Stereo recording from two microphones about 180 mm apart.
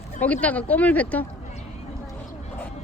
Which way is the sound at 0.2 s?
10° left (ahead or behind).